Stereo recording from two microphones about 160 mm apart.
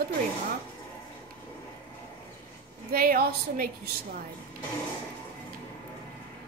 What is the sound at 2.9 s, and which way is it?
A woman's voice, 65° right (ahead or behind).